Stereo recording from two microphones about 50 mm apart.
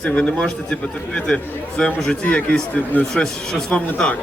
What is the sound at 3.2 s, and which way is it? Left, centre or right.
Speech, centre.